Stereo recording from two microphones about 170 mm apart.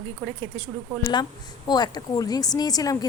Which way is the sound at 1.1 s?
25° left (ahead or behind).